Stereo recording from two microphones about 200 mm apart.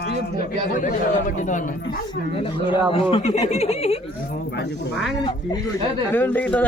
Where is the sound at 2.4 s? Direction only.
25° left (ahead or behind).